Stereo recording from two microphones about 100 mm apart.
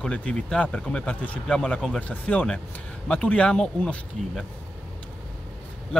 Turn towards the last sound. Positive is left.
turn(degrees=10)  # may be behind; listen again after turning